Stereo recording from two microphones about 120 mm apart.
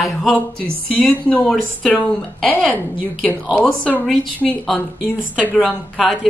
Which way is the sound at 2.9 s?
10° right (ahead or behind).